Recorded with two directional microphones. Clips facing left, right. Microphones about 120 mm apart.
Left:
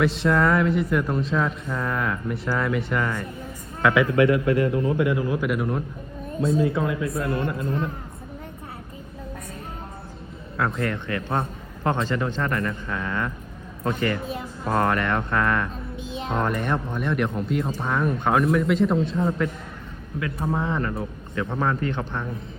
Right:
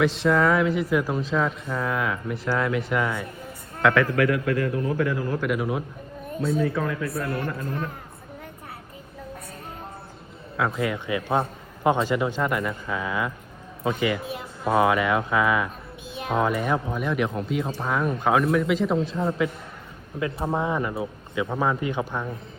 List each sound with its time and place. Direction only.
0.0 s speech: centre (ahead or behind)
4.0 s a man's voice: 25° left (ahead or behind)
5.4 s speech: centre (ahead or behind)
6.7 s a man's voice: 20° left (ahead or behind)
10.6 s a man's voice: 5° right (ahead or behind)
16.0 s music: 20° left (ahead or behind)
16.3 s speech: 5° right (ahead or behind)
20.5 s a man's voice: 15° right (ahead or behind)